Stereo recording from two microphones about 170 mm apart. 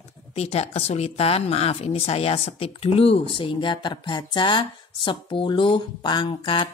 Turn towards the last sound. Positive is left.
turn(degrees=30)  # may be behind; listen again after turning